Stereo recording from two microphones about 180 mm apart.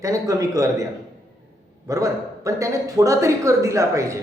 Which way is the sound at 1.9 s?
20° right (ahead or behind).